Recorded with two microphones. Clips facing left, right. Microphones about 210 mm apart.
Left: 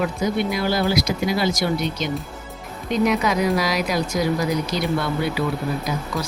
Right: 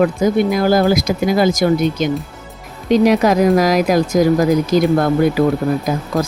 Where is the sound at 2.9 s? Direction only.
90° right.